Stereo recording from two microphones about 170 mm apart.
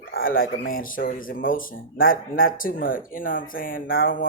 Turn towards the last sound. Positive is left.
turn(degrees=55)  # may be behind; listen again after turning